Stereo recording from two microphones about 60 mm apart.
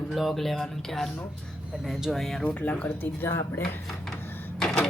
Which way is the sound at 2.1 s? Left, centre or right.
Centre.